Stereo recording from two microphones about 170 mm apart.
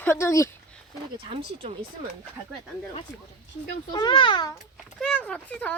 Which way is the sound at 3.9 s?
25° left (ahead or behind).